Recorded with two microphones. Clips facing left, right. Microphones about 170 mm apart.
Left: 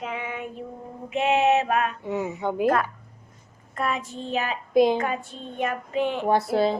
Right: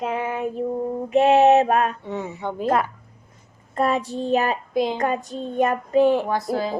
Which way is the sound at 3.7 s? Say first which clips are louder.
Right 6 dB; 35° right (ahead or behind).